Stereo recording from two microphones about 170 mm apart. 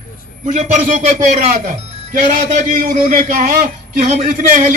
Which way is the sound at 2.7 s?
50° right (ahead or behind).